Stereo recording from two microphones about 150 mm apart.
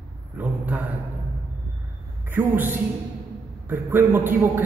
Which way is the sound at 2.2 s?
15° right (ahead or behind).